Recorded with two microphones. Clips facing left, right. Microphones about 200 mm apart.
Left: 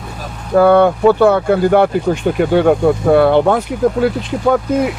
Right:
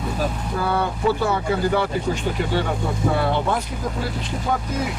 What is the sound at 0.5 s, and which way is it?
Speech, 60° left (ahead or behind).